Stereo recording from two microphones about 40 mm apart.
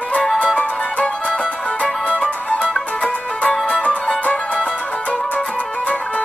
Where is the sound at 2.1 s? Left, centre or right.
Left.